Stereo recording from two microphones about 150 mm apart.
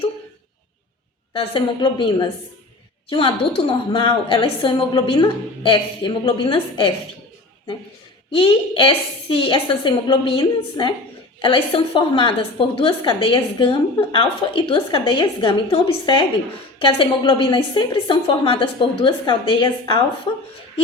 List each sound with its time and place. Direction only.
1.3 s a woman's voice: 35° left (ahead or behind)
8.4 s a woman's voice: 35° left (ahead or behind)